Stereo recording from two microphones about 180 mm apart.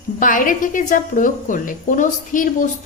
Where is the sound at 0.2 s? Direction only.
45° left (ahead or behind).